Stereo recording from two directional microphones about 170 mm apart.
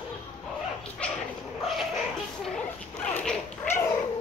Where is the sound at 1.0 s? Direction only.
5° left (ahead or behind).